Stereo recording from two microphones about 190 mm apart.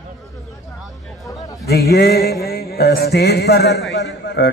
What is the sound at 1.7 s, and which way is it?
A man's voice, 60° left (ahead or behind).